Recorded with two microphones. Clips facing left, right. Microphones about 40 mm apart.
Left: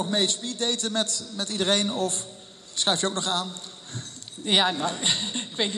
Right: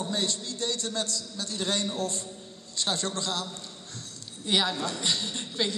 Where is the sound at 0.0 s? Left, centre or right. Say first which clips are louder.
Left 5 dB; left.